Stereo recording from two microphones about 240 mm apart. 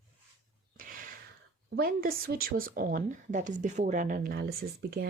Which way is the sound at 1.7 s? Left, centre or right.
Right.